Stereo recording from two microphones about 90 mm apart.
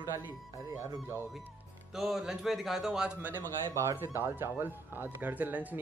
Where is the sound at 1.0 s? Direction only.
30° right (ahead or behind).